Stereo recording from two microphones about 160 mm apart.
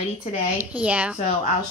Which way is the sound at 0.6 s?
10° right (ahead or behind).